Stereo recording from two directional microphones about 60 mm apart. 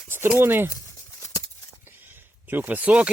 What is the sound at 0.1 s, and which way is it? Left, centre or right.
Speech, right.